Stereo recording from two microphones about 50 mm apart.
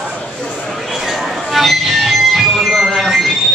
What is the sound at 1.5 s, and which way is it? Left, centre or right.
Music, centre.